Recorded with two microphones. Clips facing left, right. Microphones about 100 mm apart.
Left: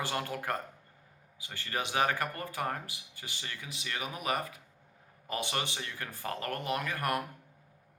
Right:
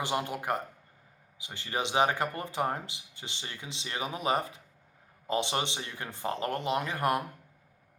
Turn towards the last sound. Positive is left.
turn(degrees=-20)  # may be behind; listen again after turning